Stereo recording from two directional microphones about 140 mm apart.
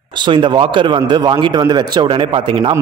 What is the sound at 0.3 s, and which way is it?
A man's voice, 35° right (ahead or behind).